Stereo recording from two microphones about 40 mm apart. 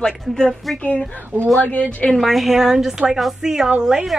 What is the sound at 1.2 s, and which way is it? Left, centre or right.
Speech, right.